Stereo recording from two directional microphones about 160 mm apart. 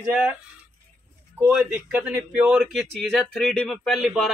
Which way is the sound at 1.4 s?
15° right (ahead or behind).